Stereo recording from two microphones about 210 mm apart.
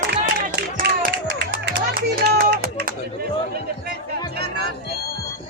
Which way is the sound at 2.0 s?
45° right (ahead or behind).